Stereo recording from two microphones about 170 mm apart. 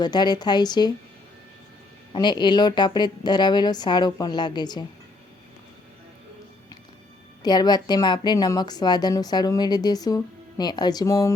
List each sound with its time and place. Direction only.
0.0 s a woman's voice: 25° left (ahead or behind)
2.1 s a woman's voice: 25° left (ahead or behind)
7.4 s a woman's voice: 25° left (ahead or behind)